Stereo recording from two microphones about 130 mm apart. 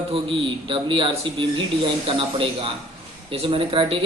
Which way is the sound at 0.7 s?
40° right (ahead or behind).